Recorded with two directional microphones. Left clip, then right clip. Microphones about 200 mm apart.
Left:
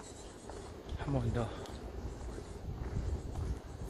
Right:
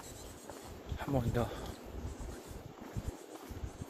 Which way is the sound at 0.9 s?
25° right (ahead or behind).